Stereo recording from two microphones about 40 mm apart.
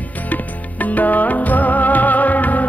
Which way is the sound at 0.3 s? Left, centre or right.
Left.